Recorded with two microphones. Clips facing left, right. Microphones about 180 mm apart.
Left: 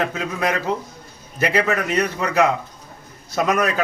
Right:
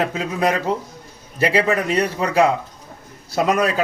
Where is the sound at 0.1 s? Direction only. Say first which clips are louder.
Right 3 dB; 30° right (ahead or behind).